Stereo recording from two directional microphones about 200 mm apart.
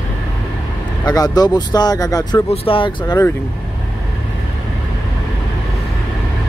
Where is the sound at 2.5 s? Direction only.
30° left (ahead or behind).